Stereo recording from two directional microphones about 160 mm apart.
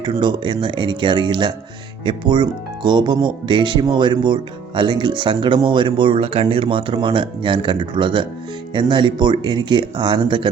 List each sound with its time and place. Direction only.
0.0 s speech: 25° right (ahead or behind)